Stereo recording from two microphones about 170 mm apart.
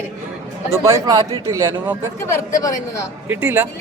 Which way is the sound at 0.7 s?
15° right (ahead or behind).